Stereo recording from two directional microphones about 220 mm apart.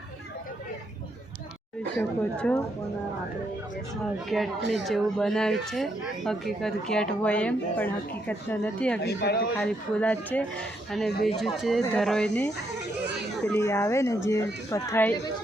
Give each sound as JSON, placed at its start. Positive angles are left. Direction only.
{"t": 2.0, "sound": "speech", "side_deg": 5}
{"t": 4.3, "sound": "speech", "side_deg": 0}
{"t": 9.0, "sound": "speech", "side_deg": 45}
{"t": 9.6, "sound": "speech", "side_deg": 5}
{"t": 13.5, "sound": "speech", "side_deg": 15}